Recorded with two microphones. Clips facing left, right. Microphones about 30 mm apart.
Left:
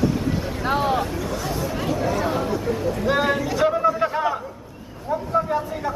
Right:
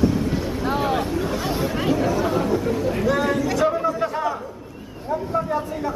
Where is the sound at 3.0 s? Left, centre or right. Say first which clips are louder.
Left 1 dB; left.